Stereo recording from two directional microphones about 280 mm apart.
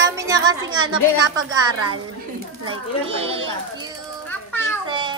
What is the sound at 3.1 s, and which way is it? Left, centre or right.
Speech, right.